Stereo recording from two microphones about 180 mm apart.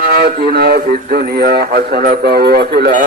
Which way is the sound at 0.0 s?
55° right (ahead or behind).